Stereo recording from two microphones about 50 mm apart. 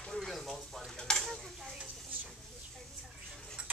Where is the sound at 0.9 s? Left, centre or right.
Centre.